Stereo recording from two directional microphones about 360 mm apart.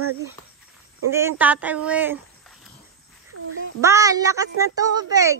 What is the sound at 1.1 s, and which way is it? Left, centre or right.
Speech, centre.